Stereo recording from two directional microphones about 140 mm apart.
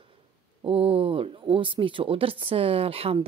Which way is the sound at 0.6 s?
40° right (ahead or behind).